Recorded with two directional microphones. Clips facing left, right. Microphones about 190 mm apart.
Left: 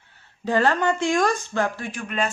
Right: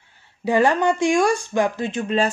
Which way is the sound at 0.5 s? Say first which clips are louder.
Right 3 dB; 15° right (ahead or behind).